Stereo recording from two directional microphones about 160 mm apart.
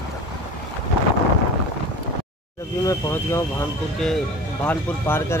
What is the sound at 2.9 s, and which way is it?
Speech, 15° left (ahead or behind).